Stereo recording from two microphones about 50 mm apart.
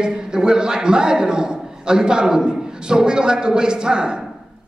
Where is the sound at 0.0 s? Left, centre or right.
Centre.